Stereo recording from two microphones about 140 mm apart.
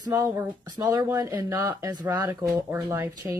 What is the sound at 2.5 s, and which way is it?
Speech, 15° right (ahead or behind).